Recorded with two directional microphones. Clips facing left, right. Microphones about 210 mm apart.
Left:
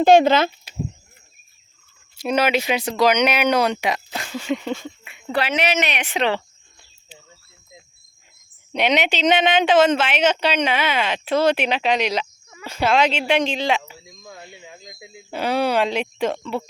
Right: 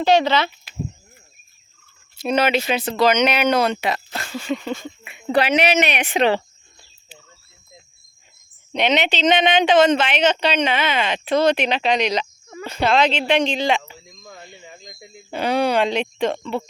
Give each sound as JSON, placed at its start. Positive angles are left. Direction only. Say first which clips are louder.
{"t": 0.0, "sound": "speech", "louder": "left 4 dB", "side_deg": 50}
{"t": 2.1, "sound": "speech", "louder": "right 1 dB", "side_deg": 10}
{"t": 4.4, "sound": "speech", "louder": "left 1 dB", "side_deg": 15}
{"t": 5.0, "sound": "speech", "louder": "right 5 dB", "side_deg": -20}
{"t": 8.7, "sound": "speech", "louder": "even", "side_deg": 10}